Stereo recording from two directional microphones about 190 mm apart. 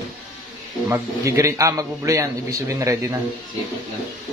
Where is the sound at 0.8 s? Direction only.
15° right (ahead or behind).